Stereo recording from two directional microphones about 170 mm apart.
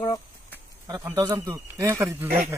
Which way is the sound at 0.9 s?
15° right (ahead or behind).